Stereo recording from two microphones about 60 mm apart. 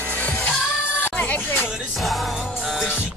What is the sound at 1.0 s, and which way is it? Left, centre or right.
Music, left.